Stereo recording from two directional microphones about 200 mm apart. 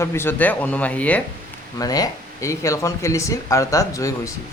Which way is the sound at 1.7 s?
20° left (ahead or behind).